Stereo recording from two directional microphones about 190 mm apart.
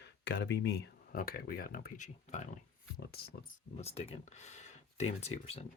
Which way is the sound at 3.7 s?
30° left (ahead or behind).